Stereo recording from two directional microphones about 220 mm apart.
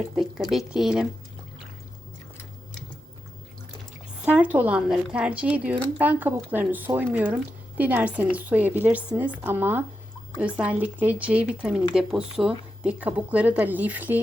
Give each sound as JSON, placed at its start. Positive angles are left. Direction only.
{"t": 0.5, "sound": "speech", "side_deg": 0}
{"t": 4.3, "sound": "speech", "side_deg": -5}